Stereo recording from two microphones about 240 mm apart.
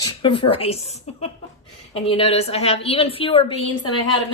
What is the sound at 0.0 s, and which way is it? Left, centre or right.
A woman's voice, centre.